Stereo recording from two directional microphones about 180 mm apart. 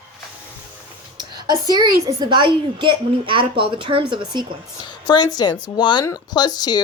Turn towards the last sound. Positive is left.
turn(degrees=25)  # may be behind; listen again after turning